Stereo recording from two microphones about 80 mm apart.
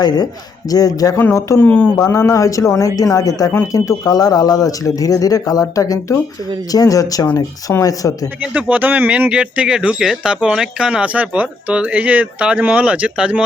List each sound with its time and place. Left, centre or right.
0.7 s speech: left
1.2 s speech: left
1.5 s speech: centre
2.0 s speech: left
8.4 s speech: centre